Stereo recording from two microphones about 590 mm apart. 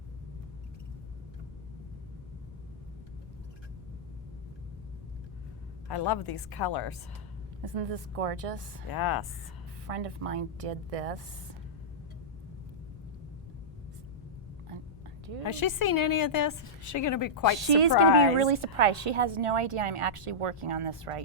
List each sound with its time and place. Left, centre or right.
5.9 s a woman's voice: left
7.6 s speech: right
8.9 s a woman's voice: left
9.8 s a woman's voice: right
15.8 s a woman's voice: left
17.6 s a woman's voice: right